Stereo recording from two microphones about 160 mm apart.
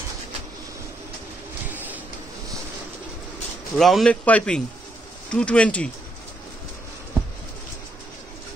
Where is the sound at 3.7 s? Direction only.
Centre (ahead or behind).